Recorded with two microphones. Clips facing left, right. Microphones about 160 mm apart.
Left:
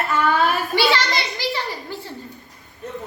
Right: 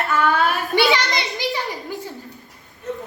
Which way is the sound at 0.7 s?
20° right (ahead or behind).